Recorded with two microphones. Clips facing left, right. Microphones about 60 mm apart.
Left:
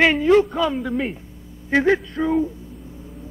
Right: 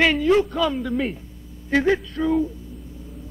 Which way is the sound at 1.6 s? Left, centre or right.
Left.